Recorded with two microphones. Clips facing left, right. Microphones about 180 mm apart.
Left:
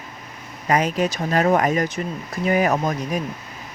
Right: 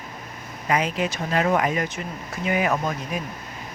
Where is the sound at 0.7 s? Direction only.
45° left (ahead or behind).